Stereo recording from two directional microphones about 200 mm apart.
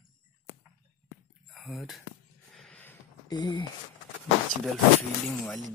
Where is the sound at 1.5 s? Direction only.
Centre (ahead or behind).